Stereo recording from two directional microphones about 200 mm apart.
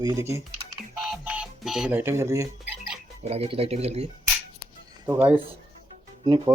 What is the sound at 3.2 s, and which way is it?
Speech, 30° right (ahead or behind).